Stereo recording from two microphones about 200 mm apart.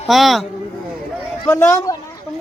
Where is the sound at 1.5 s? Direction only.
15° left (ahead or behind).